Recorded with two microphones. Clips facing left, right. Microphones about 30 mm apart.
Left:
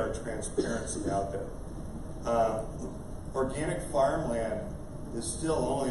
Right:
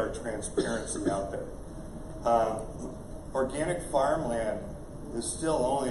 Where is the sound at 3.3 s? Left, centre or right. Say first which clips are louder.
Right 2 dB; right.